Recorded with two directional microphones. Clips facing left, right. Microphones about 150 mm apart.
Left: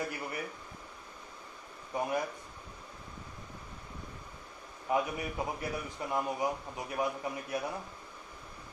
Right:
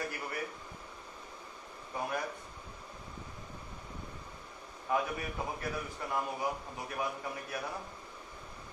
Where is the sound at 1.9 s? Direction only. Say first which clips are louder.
Left 4 dB; 15° left (ahead or behind).